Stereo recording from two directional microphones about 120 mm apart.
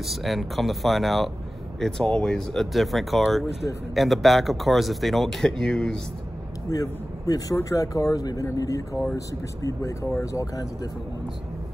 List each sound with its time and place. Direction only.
0.0 s speech: centre (ahead or behind)
6.7 s a man's voice: 30° left (ahead or behind)